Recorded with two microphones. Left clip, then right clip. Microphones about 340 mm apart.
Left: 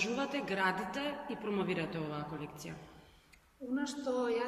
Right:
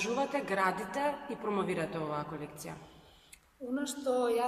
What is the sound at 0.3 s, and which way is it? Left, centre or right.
A man's voice, centre.